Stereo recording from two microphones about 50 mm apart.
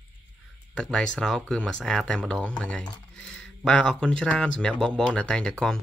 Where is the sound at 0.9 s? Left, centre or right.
Centre.